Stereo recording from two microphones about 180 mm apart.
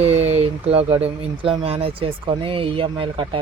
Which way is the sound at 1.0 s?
30° right (ahead or behind).